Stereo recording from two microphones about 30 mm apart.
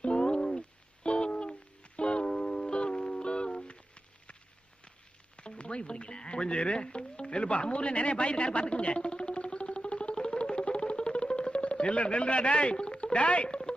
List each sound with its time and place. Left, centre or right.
0.0 s a sound: left
1.0 s music: left
5.4 s frog: left